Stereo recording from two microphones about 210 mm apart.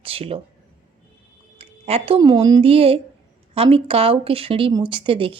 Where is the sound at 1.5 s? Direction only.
30° right (ahead or behind).